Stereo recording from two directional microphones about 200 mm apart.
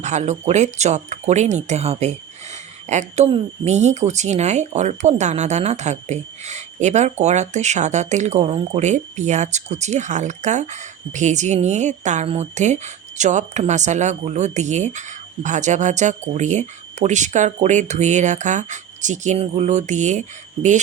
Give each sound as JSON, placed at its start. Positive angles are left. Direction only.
{"t": 0.0, "sound": "speech", "side_deg": -35}